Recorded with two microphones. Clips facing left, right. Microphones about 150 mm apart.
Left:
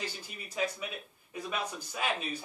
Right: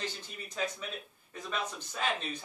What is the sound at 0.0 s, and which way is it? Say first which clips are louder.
A man's voice: right 1 dB; 10° left (ahead or behind).